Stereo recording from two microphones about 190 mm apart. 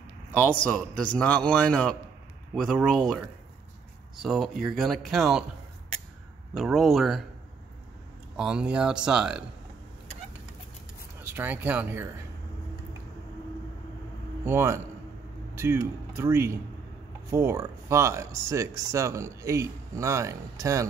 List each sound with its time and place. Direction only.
0.4 s a man's voice: 5° left (ahead or behind)
4.2 s a man's voice: centre (ahead or behind)
6.5 s a man's voice: centre (ahead or behind)
8.4 s a man's voice: 5° right (ahead or behind)
11.1 s speech: 10° right (ahead or behind)
14.4 s a man's voice: 15° right (ahead or behind)